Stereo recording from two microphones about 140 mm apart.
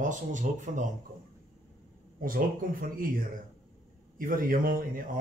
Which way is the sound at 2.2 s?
80° right.